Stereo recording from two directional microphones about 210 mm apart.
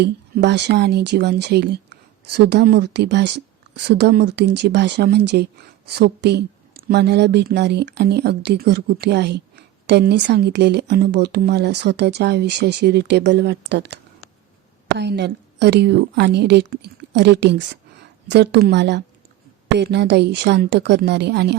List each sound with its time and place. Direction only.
0.0 s speech: 55° right (ahead or behind)